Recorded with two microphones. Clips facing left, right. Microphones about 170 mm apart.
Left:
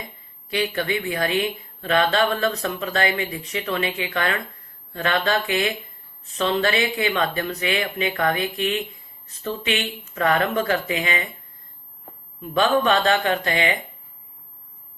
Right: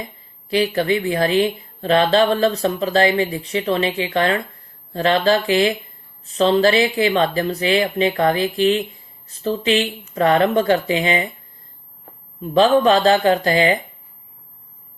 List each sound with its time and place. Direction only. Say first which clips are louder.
0.5 s speech: right 6 dB; 30° right (ahead or behind)
12.4 s speech: right 6 dB; 30° right (ahead or behind)